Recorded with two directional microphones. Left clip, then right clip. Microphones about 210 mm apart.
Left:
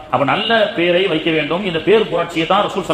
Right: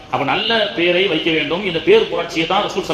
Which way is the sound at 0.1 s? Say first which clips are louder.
Left 2 dB; 30° left (ahead or behind).